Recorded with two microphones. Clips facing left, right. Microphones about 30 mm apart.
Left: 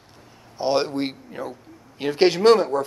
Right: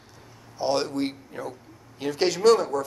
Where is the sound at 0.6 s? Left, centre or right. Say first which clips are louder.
Left 3 dB; left.